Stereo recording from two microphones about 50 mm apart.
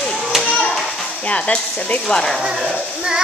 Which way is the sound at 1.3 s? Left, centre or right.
Left.